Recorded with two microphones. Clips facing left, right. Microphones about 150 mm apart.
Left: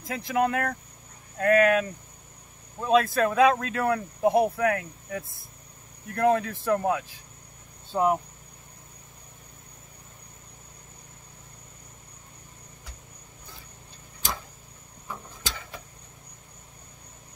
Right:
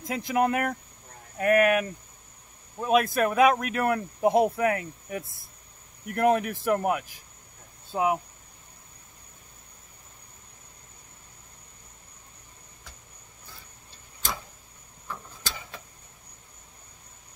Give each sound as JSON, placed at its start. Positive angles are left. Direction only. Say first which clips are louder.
{"t": 0.0, "sound": "speech", "louder": "even", "side_deg": -20}
{"t": 7.9, "sound": "speech", "louder": "left 2 dB", "side_deg": -5}